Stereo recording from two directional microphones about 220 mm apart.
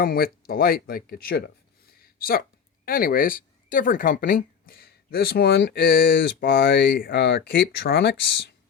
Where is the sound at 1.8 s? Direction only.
45° left (ahead or behind).